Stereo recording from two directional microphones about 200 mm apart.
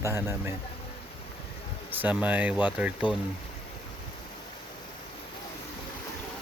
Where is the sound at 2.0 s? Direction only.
10° right (ahead or behind).